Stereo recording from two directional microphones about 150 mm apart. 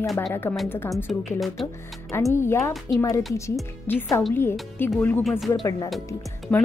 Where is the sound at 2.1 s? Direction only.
20° left (ahead or behind).